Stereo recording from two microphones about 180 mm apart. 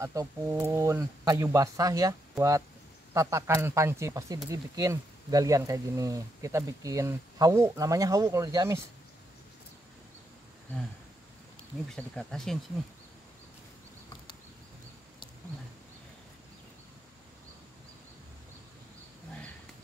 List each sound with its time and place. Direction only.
0.0 s speech: 15° right (ahead or behind)
11.9 s speech: 5° left (ahead or behind)